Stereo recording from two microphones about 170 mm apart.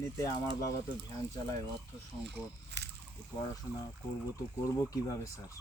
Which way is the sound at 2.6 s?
80° right.